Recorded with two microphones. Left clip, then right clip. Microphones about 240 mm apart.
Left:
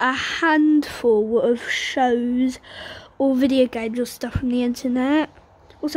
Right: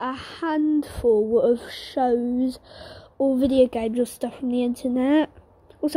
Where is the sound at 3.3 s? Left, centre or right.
Centre.